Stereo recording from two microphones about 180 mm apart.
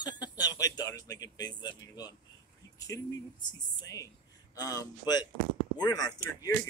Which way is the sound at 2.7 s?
20° left (ahead or behind).